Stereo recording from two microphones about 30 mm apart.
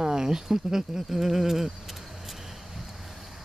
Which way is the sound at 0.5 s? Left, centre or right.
Centre.